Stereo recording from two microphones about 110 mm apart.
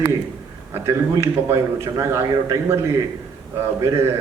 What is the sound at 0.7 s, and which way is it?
A man's voice, 25° right (ahead or behind).